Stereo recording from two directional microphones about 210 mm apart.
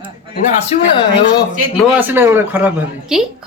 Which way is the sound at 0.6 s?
25° left (ahead or behind).